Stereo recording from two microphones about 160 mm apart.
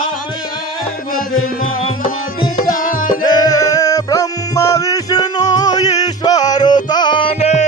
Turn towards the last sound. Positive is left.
turn(degrees=40)  # may be behind; listen again after turning